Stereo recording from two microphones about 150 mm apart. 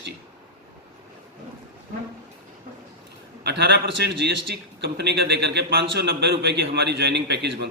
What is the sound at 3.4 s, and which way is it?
A man's voice, 90° right.